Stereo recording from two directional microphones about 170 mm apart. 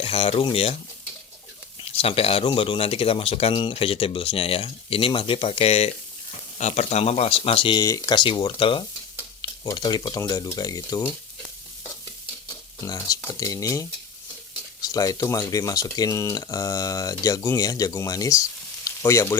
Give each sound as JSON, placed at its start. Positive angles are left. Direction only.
{"t": 0.0, "sound": "speech", "side_deg": 35}
{"t": 1.8, "sound": "speech", "side_deg": 35}
{"t": 12.8, "sound": "speech", "side_deg": 20}